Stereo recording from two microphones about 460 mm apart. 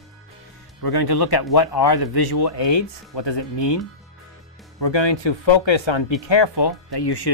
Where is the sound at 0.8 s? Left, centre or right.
Left.